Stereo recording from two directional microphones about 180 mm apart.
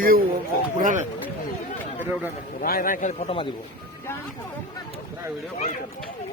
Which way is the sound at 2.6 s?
50° left (ahead or behind).